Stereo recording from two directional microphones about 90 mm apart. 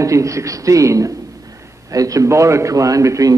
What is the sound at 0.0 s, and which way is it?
A man's voice, 35° right (ahead or behind).